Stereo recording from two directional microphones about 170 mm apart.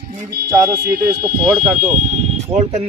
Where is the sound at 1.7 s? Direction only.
45° right (ahead or behind).